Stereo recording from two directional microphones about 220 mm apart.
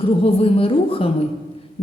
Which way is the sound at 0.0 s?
25° left (ahead or behind).